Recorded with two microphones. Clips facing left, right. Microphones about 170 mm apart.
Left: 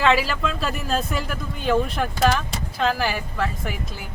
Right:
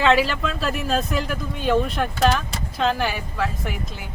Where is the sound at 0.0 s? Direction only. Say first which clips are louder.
Right 1 dB; centre (ahead or behind).